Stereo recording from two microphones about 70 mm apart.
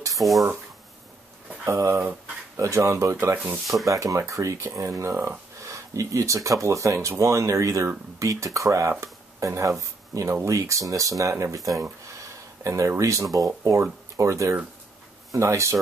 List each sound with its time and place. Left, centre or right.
0.2 s speech: centre
1.7 s speech: right